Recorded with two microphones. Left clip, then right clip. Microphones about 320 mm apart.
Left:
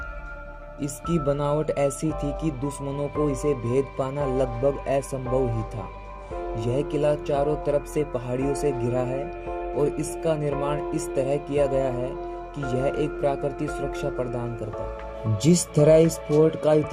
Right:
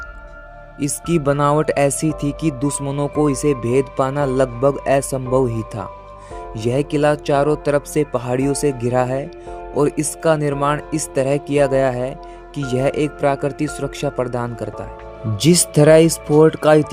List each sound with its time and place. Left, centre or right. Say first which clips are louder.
0.8 s speech: right 8 dB; right
6.6 s speech: right 8 dB; right